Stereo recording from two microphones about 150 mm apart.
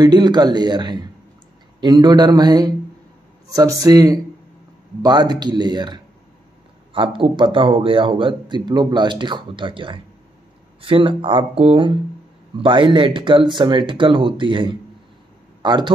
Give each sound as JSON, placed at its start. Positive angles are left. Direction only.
{"t": 0.0, "sound": "a man's voice", "side_deg": -30}